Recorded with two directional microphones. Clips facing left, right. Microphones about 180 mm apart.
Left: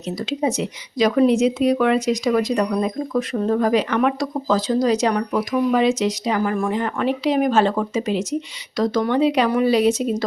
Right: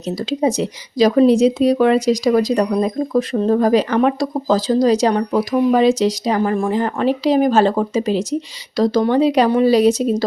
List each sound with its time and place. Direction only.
0.3 s speech: 35° right (ahead or behind)